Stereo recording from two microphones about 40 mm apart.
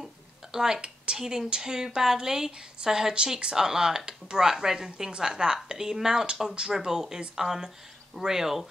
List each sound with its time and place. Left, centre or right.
0.0 s a sound: centre
0.7 s speech: right
1.2 s a woman's voice: centre